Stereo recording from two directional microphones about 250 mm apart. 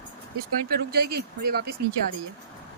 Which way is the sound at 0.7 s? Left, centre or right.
Right.